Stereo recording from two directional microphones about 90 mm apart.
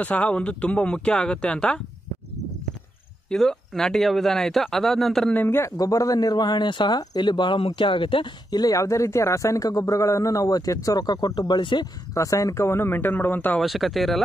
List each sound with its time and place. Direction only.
0.0 s speech: 15° left (ahead or behind)
3.3 s speech: 5° left (ahead or behind)
5.3 s a man's voice: 25° left (ahead or behind)
5.8 s speech: 40° left (ahead or behind); by 8.3 s 70° left (ahead or behind)
8.5 s a man's voice: 45° left (ahead or behind)
12.1 s a man's voice: 35° left (ahead or behind); by 13.6 s 20° left (ahead or behind)
13.6 s speech: centre (ahead or behind)